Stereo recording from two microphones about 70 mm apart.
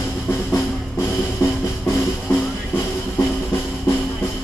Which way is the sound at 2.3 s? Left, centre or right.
Left.